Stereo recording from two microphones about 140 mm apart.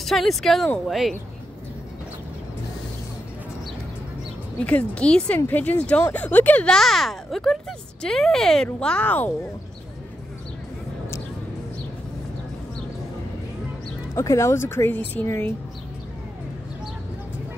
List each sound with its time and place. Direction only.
0.0 s speech: centre (ahead or behind)
4.6 s speech: 10° left (ahead or behind)
14.1 s speech: 20° left (ahead or behind)